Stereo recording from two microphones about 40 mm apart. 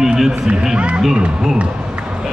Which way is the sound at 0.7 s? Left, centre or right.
Right.